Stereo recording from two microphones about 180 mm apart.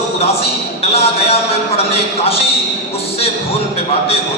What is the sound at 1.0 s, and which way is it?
Speech, 35° left (ahead or behind).